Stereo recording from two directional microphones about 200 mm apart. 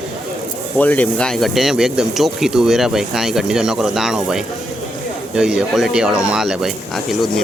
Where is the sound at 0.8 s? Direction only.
10° left (ahead or behind).